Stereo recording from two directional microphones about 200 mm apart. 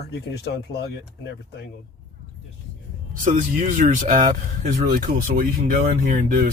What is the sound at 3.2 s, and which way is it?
Speech, 40° right (ahead or behind).